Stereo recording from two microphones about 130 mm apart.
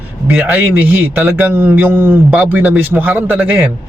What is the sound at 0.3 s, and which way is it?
A man's voice, 15° right (ahead or behind).